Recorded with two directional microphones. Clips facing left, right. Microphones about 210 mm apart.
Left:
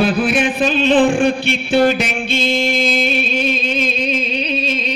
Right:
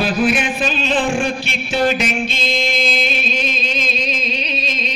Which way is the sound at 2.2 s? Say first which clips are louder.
Left 4 dB; 55° left (ahead or behind).